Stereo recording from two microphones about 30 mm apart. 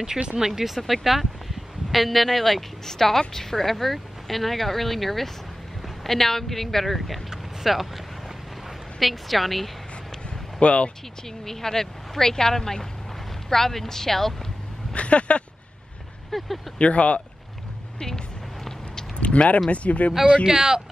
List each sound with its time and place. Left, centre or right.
0.2 s speech: right
0.6 s a woman's voice: centre
9.0 s a woman's voice: centre
10.6 s speech: left
11.4 s speech: centre
15.0 s a sound: left
16.3 s speech: centre
16.7 s speech: left
17.9 s speech: left
19.1 s a sound: left
19.7 s speech: left
20.4 s speech: right